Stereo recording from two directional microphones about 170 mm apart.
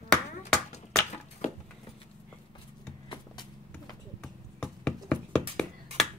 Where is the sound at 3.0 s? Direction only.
25° left (ahead or behind).